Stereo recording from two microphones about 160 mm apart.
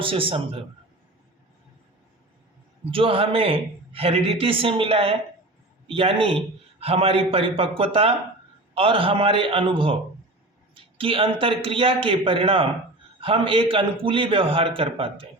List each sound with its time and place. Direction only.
0.0 s a man's voice: 35° right (ahead or behind)
2.9 s a man's voice: 35° right (ahead or behind)